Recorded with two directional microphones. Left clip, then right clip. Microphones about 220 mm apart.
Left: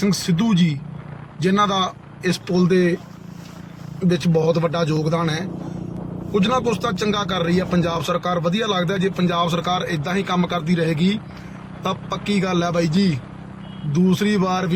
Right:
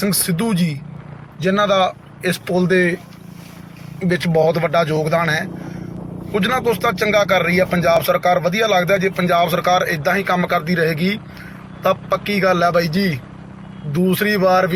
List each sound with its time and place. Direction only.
0.0 s speech: centre (ahead or behind)
4.1 s speech: centre (ahead or behind)